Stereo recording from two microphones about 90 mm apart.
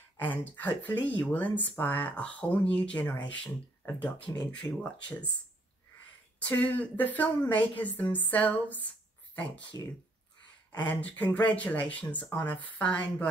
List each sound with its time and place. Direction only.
0.6 s a woman's voice: 20° left (ahead or behind)
6.5 s a woman's voice: 15° left (ahead or behind)
10.8 s a woman's voice: 15° left (ahead or behind)